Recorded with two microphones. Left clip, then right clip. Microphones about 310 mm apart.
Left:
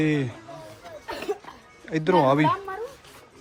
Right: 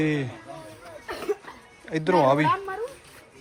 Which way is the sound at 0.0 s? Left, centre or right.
Centre.